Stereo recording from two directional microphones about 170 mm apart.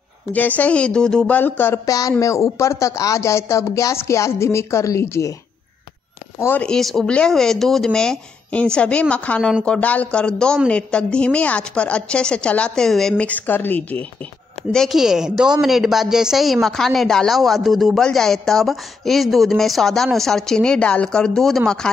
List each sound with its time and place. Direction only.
0.3 s speech: 10° left (ahead or behind)
6.4 s speech: 10° left (ahead or behind)